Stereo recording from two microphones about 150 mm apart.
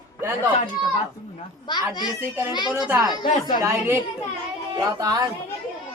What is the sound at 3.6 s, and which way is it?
A man's voice, 15° right (ahead or behind).